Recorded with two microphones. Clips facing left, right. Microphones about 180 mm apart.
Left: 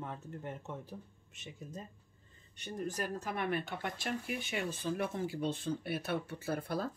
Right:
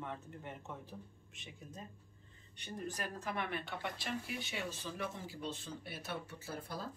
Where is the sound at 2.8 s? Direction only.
45° left (ahead or behind).